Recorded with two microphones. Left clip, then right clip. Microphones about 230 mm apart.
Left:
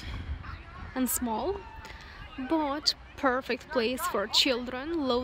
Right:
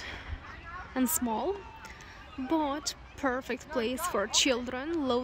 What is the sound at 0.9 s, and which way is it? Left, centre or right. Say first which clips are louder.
Speech: even; centre.